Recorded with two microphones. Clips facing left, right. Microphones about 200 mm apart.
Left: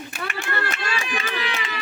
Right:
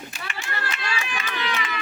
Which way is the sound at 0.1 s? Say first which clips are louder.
Left 8 dB; 55° left (ahead or behind).